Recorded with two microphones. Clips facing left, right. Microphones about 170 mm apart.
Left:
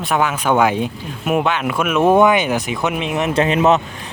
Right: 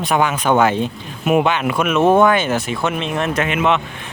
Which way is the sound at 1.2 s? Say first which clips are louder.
Right 2 dB; centre (ahead or behind).